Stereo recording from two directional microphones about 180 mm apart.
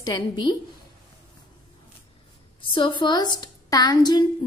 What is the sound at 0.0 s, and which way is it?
Speech, 25° left (ahead or behind).